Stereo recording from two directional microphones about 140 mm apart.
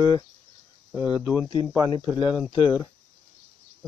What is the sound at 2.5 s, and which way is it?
Speech, 40° left (ahead or behind).